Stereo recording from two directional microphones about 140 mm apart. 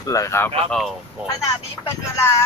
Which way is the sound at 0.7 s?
Centre (ahead or behind).